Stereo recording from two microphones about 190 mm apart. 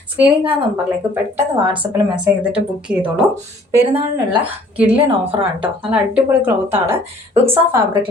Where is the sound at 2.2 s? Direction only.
5° right (ahead or behind).